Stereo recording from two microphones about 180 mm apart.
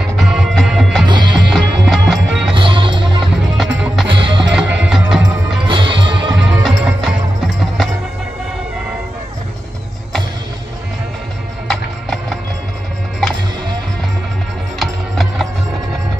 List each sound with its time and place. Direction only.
0.2 s music: centre (ahead or behind)
1.0 s music: 25° right (ahead or behind)
1.5 s music: centre (ahead or behind)
2.5 s music: 30° right (ahead or behind)
3.5 s music: centre (ahead or behind)
4.1 s music: 30° right (ahead or behind)
4.5 s music: 5° right (ahead or behind)
5.7 s music: 25° right (ahead or behind)
6.6 s music: centre (ahead or behind)
11.6 s music: centre (ahead or behind)
14.8 s music: centre (ahead or behind)